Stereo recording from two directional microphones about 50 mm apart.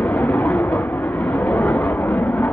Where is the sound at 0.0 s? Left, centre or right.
Left.